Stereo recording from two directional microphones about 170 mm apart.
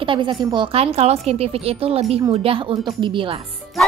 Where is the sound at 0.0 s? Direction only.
30° right (ahead or behind).